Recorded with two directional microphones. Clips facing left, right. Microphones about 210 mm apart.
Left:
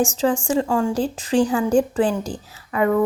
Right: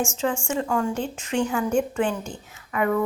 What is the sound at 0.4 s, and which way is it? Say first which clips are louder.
A woman's voice: left 5 dB; 35° left (ahead or behind).